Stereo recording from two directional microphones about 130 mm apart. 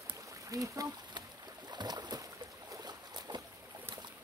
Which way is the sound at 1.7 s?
35° right (ahead or behind).